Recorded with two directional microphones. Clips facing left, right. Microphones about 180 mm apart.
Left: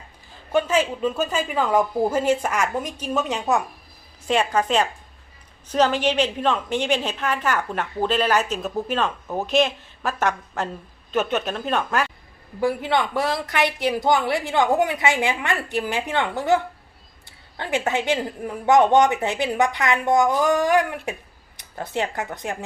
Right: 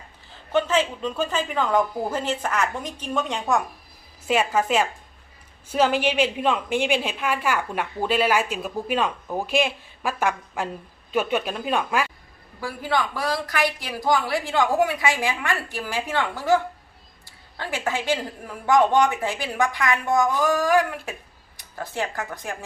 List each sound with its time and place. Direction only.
0.5 s speech: 10° left (ahead or behind)
4.3 s a man's voice: 5° right (ahead or behind)
12.5 s a woman's voice: 25° left (ahead or behind)
17.6 s a woman's voice: 20° left (ahead or behind)